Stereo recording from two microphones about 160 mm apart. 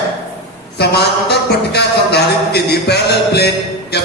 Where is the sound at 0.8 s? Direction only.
90° left.